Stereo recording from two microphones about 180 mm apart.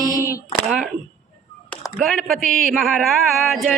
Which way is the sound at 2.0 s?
Centre (ahead or behind).